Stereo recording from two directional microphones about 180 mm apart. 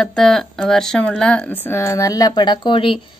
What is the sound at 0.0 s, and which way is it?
Speech, centre (ahead or behind).